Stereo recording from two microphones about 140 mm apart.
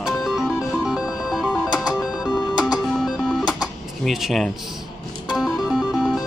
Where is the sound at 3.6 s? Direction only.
Centre (ahead or behind).